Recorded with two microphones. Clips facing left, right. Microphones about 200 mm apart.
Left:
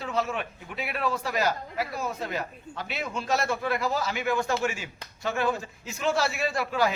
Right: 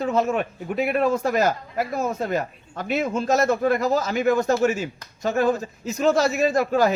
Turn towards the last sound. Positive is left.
turn(degrees=-45)  # may be behind; listen again after turning